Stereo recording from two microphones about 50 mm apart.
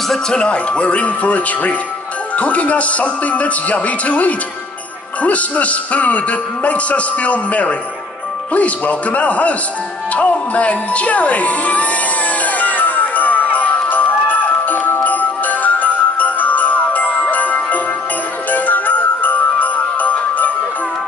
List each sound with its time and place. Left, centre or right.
0.1 s a man's voice: centre
12.4 s music: left
15.0 s jingle bell: left